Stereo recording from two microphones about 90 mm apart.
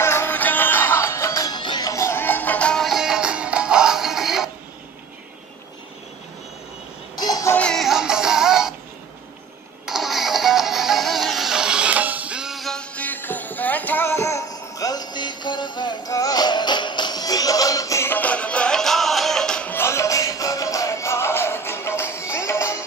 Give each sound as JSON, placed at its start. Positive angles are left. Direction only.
{"t": 0.0, "sound": "music", "side_deg": 25}
{"t": 1.4, "sound": "music", "side_deg": 55}
{"t": 1.9, "sound": "music", "side_deg": 30}
{"t": 2.7, "sound": "music", "side_deg": 0}
{"t": 7.2, "sound": "music", "side_deg": 45}
{"t": 7.7, "sound": "music", "side_deg": -5}
{"t": 9.8, "sound": "music", "side_deg": -5}
{"t": 12.9, "sound": "music", "side_deg": 20}
{"t": 14.2, "sound": "music", "side_deg": 35}
{"t": 16.1, "sound": "music", "side_deg": 40}
{"t": 18.1, "sound": "music", "side_deg": 15}
{"t": 19.7, "sound": "music", "side_deg": 30}